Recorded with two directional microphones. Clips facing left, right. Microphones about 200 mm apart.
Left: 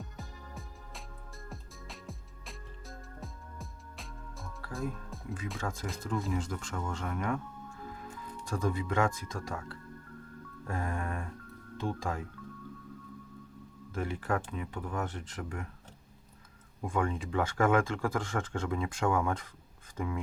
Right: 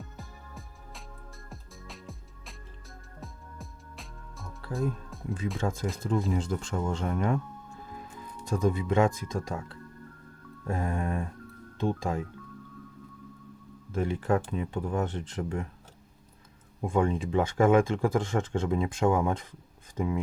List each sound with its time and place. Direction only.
0.2 s music: centre (ahead or behind)
4.7 s speech: centre (ahead or behind)
5.5 s speech: 25° right (ahead or behind)
8.4 s speech: 20° right (ahead or behind)
13.9 s speech: 20° right (ahead or behind)
16.8 s speech: 25° right (ahead or behind)